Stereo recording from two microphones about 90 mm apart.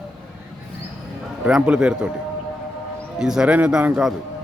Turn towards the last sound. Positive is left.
turn(degrees=-10)  # may be behind; listen again after turning